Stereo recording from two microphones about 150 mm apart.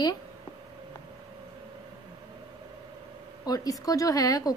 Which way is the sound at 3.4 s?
25° left (ahead or behind).